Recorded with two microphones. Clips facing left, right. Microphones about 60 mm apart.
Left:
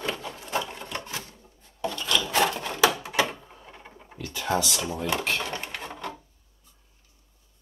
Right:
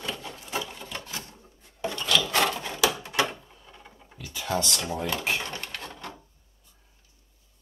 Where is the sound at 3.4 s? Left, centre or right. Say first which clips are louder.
Left 4 dB; left.